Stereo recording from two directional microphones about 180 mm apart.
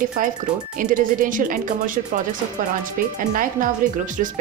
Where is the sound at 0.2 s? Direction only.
50° right (ahead or behind).